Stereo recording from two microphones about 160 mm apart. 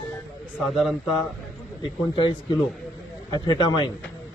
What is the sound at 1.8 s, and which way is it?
Speech, 30° left (ahead or behind).